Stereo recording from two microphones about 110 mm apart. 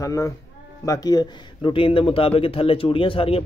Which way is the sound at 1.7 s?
55° left (ahead or behind).